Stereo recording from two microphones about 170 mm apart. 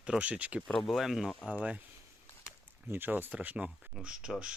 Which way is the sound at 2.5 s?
10° right (ahead or behind).